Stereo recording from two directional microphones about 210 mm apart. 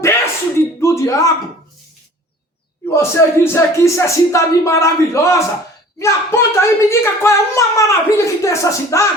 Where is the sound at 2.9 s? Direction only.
15° left (ahead or behind).